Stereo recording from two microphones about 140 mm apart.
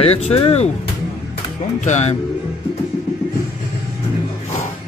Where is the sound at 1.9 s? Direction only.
55° left (ahead or behind).